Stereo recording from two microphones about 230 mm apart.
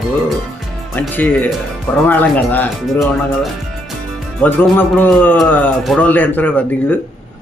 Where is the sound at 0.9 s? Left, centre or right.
Centre.